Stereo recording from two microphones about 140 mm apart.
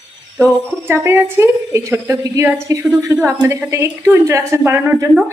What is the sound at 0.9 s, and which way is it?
Speech, 15° right (ahead or behind).